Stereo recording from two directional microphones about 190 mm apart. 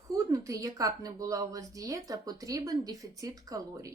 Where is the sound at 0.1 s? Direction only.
15° right (ahead or behind).